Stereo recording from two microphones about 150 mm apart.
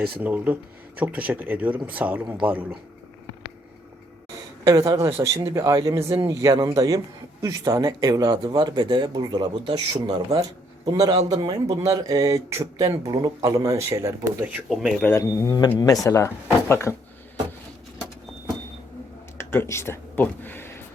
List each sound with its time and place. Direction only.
0.2 s speech: 10° right (ahead or behind)
4.6 s speech: 20° right (ahead or behind)
14.7 s speech: 5° right (ahead or behind)
15.0 s speech: 15° left (ahead or behind)
19.4 s speech: 15° left (ahead or behind)